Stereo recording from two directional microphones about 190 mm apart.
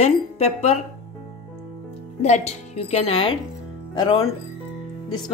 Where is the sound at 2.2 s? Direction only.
35° left (ahead or behind).